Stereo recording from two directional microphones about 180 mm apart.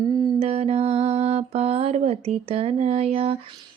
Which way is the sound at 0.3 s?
35° right (ahead or behind).